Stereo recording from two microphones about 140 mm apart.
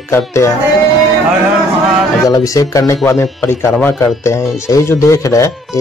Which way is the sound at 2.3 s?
25° left (ahead or behind).